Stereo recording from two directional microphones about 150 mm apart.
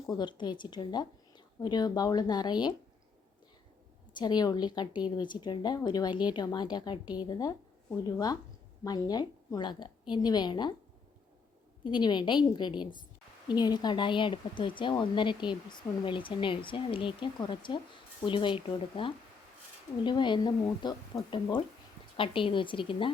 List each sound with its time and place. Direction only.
0.2 s a woman's voice: 30° left (ahead or behind)
4.1 s a woman's voice: 30° left (ahead or behind)
11.8 s a woman's voice: 30° left (ahead or behind)